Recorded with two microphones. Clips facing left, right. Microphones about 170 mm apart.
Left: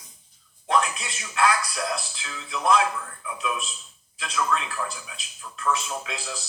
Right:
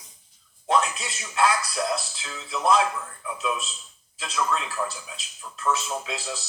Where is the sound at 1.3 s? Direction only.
25° right (ahead or behind).